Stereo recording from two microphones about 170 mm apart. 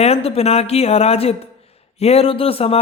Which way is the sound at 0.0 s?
35° left (ahead or behind).